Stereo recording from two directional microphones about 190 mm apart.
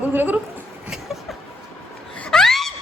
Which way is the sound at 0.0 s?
10° right (ahead or behind).